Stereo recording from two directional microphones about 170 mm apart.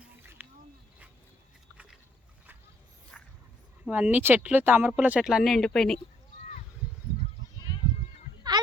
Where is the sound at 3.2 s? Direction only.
10° left (ahead or behind).